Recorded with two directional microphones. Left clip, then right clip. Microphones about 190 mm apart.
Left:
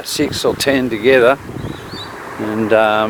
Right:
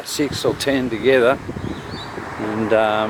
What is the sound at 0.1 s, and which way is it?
Speech, 25° left (ahead or behind).